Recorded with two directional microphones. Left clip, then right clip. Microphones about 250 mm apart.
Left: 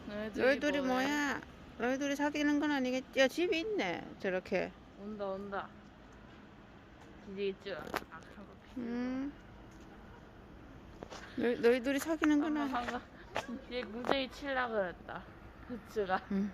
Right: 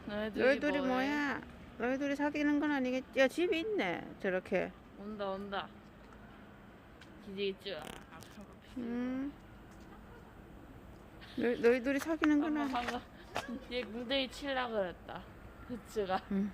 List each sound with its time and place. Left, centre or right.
0.1 s a sound: centre
0.3 s speech: centre
5.1 s speech: centre
7.3 s speech: centre
8.8 s speech: centre
11.5 s speech: centre